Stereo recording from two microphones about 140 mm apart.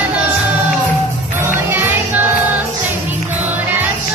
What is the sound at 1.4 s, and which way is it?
Music, 15° right (ahead or behind).